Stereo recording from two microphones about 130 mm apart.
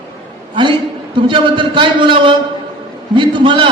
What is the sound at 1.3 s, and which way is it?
A man's voice, 40° right (ahead or behind).